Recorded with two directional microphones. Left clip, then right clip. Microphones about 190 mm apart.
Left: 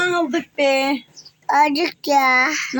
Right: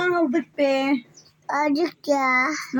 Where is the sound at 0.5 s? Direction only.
15° right (ahead or behind).